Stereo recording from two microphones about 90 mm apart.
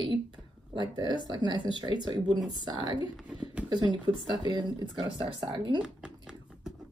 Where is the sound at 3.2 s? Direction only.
15° right (ahead or behind).